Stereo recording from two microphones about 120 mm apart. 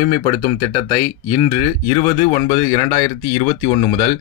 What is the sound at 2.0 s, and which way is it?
Speech, 45° left (ahead or behind).